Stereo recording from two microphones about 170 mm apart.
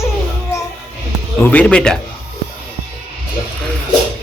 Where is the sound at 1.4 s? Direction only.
5° left (ahead or behind).